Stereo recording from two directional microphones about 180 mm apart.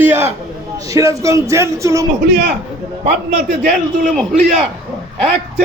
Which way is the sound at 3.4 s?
40° right (ahead or behind).